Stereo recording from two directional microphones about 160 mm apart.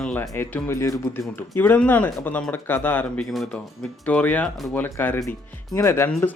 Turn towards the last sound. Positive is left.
turn(degrees=15)  # may be behind; listen again after turning